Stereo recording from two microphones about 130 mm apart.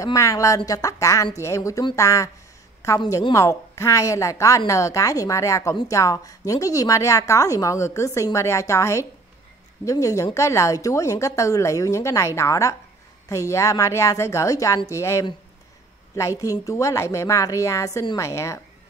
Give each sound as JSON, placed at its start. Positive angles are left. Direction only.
{"t": 0.0, "sound": "a woman's voice", "side_deg": 25}